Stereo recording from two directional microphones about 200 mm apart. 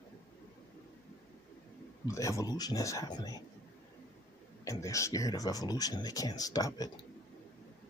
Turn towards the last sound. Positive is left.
turn(degrees=20)  # may be behind; listen again after turning